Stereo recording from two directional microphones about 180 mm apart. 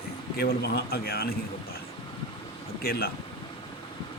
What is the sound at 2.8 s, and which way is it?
Speech, 60° left (ahead or behind).